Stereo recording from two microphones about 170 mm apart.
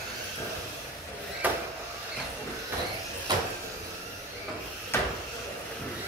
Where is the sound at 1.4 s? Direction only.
10° right (ahead or behind).